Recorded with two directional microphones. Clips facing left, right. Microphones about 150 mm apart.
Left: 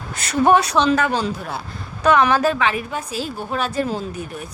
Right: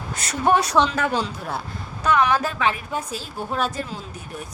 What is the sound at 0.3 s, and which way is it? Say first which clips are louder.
Speech: left 5 dB; 90° left.